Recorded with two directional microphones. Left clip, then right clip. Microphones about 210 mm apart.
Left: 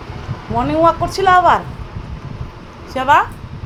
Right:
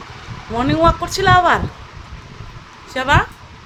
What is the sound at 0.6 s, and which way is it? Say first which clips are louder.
A woman's voice: left 1 dB; 15° right (ahead or behind).